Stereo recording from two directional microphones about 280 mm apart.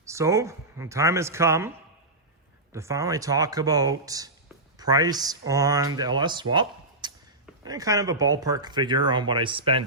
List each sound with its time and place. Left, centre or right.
0.0 s speech: centre
2.7 s speech: centre
6.5 s a sound: centre
7.6 s speech: centre